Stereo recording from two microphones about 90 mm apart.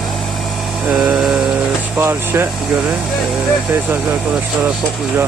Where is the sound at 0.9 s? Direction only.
5° right (ahead or behind).